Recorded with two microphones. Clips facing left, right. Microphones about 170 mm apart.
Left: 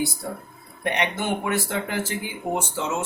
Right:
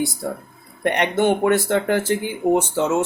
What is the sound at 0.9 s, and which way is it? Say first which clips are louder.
Speech: right 7 dB; 55° right (ahead or behind).